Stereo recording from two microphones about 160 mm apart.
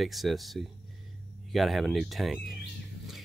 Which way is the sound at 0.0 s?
Centre (ahead or behind).